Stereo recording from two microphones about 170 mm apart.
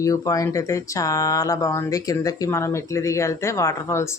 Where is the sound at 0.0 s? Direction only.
20° left (ahead or behind).